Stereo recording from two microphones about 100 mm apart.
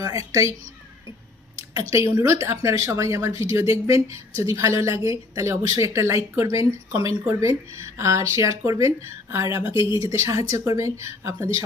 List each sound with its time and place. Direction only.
0.0 s a woman's voice: 30° right (ahead or behind)
1.7 s a woman's voice: 35° right (ahead or behind)